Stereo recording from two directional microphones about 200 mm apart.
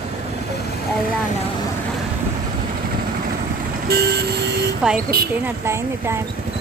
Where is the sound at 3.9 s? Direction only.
55° right (ahead or behind).